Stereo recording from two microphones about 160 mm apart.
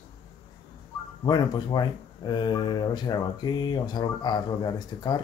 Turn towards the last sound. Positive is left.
turn(degrees=25)  # may be behind; listen again after turning